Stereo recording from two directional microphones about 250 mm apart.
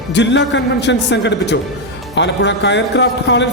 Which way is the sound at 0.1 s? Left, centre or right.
Left.